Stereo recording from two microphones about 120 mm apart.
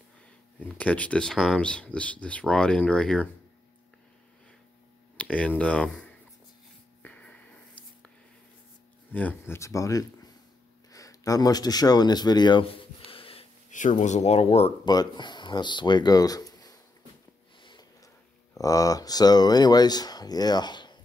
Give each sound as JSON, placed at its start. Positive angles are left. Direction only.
{"t": 0.6, "sound": "speech", "side_deg": 10}
{"t": 5.1, "sound": "speech", "side_deg": 10}
{"t": 7.0, "sound": "a sound", "side_deg": 10}
{"t": 9.1, "sound": "speech", "side_deg": 15}
{"t": 9.6, "sound": "speech", "side_deg": 25}
{"t": 13.7, "sound": "speech", "side_deg": 90}
{"t": 14.9, "sound": "speech", "side_deg": 35}
{"t": 17.6, "sound": "a sound", "side_deg": 40}
{"t": 18.6, "sound": "speech", "side_deg": 30}